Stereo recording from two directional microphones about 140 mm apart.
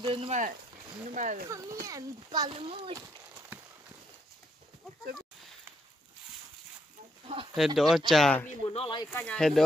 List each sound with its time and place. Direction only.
0.0 s speech: 40° right (ahead or behind)
0.3 s speech: 65° right (ahead or behind)
1.9 s speech: 25° right (ahead or behind)
7.5 s speech: centre (ahead or behind)
8.6 s speech: 45° left (ahead or behind)
9.1 s speech: 5° left (ahead or behind)